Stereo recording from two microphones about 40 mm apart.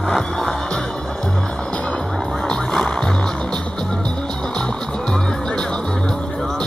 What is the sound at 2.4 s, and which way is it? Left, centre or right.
Music, centre.